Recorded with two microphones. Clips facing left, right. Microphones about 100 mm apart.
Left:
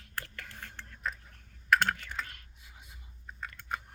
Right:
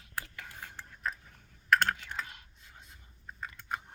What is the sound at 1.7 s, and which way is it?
Computer keyboard, centre (ahead or behind).